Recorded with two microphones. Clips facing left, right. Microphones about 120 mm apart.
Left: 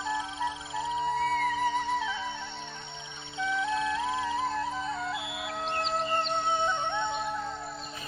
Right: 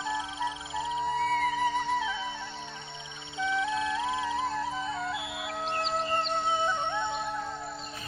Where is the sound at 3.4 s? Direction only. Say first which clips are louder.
Even; centre (ahead or behind).